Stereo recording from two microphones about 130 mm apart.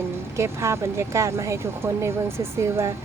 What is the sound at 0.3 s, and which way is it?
Speech, 20° right (ahead or behind).